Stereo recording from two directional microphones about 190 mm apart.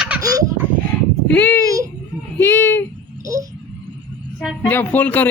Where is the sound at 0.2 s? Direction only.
20° right (ahead or behind).